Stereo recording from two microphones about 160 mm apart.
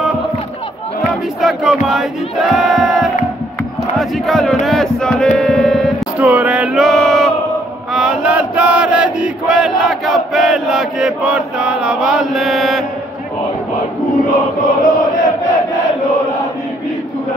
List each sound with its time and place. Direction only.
1.4 s crowd: centre (ahead or behind)
4.6 s a sound: 5° left (ahead or behind)
6.1 s music: 10° right (ahead or behind)
7.9 s chant: 5° right (ahead or behind)
14.8 s chant: 55° left (ahead or behind)